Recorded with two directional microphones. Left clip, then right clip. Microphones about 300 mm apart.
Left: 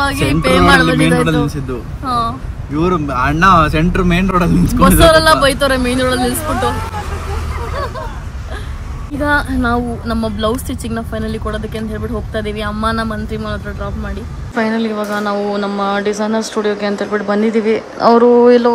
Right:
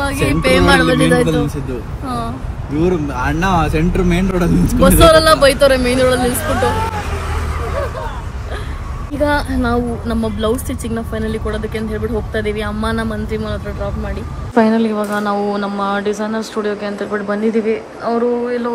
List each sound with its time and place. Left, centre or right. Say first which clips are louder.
0.3 s speech: left 1 dB; centre
2.8 s speech: left 3 dB; left
4.7 s speech: even; centre
9.2 s speech: left 1 dB; centre